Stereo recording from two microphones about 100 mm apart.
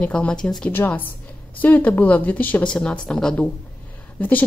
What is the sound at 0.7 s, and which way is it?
A woman's voice, 20° left (ahead or behind).